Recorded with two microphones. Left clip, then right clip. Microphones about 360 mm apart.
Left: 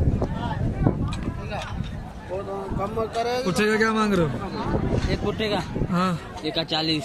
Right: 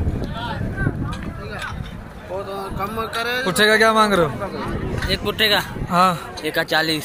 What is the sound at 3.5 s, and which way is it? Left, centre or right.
Speech, centre.